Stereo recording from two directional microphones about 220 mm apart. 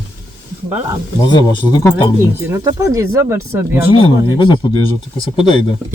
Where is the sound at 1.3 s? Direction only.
20° left (ahead or behind).